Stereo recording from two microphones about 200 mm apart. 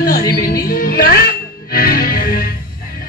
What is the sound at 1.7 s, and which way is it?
Music, 45° left (ahead or behind).